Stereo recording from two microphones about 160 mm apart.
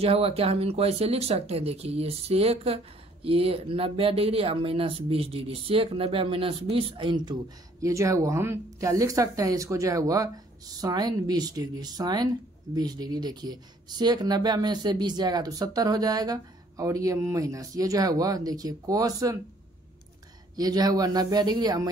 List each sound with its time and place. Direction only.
0.0 s speech: 40° right (ahead or behind); by 19.3 s 20° right (ahead or behind)
20.5 s speech: 25° right (ahead or behind)